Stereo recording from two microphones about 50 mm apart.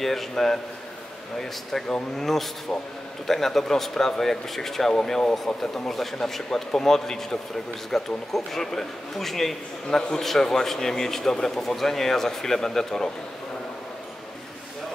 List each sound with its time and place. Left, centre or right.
0.0 s a man's voice: centre
2.7 s speech: centre
3.3 s speech: centre